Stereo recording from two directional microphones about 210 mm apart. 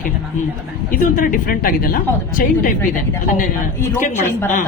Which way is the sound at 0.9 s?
40° left (ahead or behind).